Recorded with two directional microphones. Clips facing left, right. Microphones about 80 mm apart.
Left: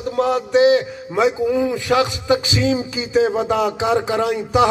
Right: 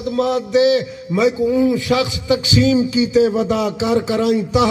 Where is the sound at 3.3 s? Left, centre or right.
Left.